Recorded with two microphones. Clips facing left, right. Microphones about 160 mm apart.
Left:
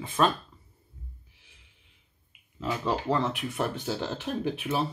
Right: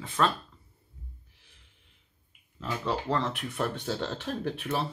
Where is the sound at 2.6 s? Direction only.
10° left (ahead or behind).